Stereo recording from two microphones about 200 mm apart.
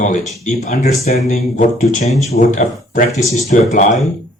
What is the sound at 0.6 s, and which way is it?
Speech, 30° left (ahead or behind).